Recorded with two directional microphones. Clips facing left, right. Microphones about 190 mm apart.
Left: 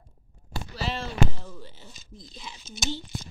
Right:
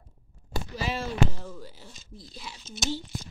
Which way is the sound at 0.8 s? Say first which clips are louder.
Even; 10° right (ahead or behind).